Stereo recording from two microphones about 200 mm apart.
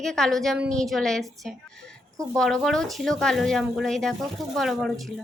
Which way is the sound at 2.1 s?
15° right (ahead or behind).